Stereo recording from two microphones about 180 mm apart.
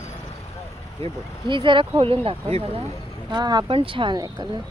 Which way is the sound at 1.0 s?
25° right (ahead or behind).